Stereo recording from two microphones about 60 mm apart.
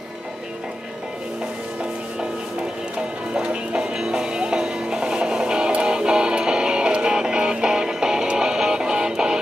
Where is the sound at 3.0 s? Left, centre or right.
Centre.